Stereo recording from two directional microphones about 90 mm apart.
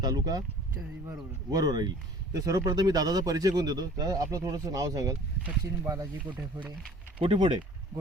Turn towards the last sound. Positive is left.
turn(degrees=-70)  # may be behind; listen again after turning